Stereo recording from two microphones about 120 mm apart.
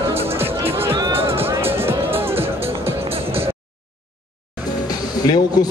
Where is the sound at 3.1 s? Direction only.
55° right (ahead or behind).